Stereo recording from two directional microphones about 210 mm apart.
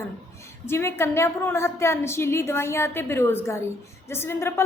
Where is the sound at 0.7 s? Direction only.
10° left (ahead or behind).